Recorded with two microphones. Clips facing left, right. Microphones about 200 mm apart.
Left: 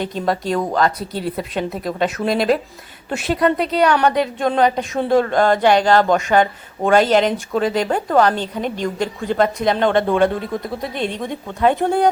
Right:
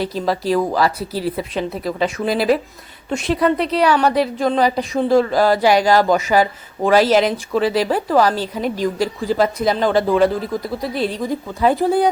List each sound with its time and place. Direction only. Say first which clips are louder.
0.0 s speech: right 1 dB; centre (ahead or behind)